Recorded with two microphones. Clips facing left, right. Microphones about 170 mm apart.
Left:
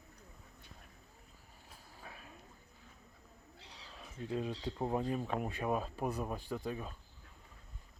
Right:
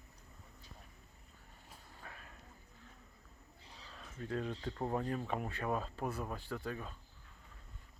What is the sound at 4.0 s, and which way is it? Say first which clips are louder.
Speech: left 1 dB; 15° left (ahead or behind).